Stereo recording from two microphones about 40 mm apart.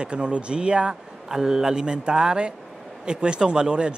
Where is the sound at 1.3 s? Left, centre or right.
Centre.